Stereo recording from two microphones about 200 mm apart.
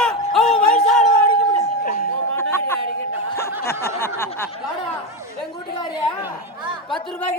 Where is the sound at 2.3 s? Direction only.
10° left (ahead or behind).